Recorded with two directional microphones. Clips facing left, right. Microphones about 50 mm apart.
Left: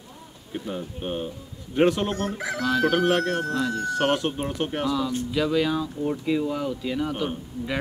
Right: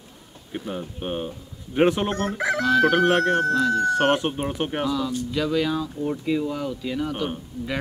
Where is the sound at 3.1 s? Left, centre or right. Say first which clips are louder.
Right 4 dB; right.